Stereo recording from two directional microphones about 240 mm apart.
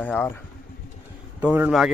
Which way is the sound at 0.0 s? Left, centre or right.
Centre.